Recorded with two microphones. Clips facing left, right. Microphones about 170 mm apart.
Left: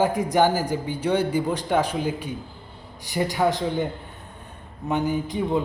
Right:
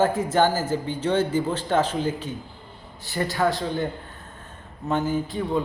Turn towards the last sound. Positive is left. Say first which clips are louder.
# left 1 dB
turn(degrees=20)  # may be behind; listen again after turning